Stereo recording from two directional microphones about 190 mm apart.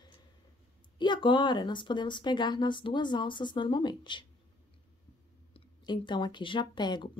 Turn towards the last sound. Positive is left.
turn(degrees=25)  # may be behind; listen again after turning